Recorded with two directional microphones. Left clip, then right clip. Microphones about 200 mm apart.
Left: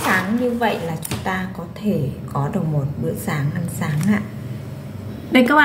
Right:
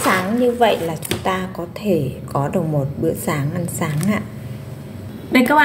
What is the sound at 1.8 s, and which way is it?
A woman's voice, 30° right (ahead or behind).